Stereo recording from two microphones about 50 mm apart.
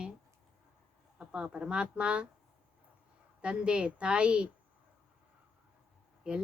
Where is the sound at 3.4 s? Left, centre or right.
Right.